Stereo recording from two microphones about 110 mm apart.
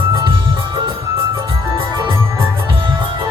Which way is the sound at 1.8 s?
50° right (ahead or behind).